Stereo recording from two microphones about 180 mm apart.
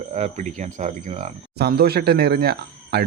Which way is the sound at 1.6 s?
60° right (ahead or behind).